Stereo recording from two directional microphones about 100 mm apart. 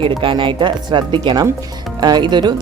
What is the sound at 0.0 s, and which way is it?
Speech, 60° right (ahead or behind).